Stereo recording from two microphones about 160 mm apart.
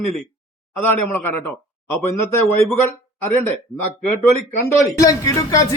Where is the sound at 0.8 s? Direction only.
10° left (ahead or behind).